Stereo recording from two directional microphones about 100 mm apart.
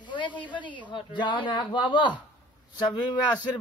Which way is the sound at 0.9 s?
50° left (ahead or behind).